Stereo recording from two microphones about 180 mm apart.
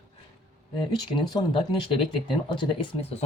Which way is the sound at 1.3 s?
25° left (ahead or behind).